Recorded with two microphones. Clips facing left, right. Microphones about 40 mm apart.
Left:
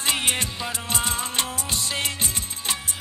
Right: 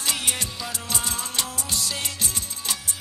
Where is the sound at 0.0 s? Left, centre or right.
Left.